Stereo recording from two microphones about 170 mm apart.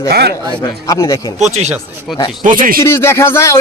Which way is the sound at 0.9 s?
20° left (ahead or behind).